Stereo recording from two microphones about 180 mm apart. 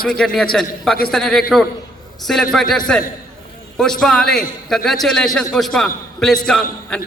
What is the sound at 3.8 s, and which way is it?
A man's voice, centre (ahead or behind).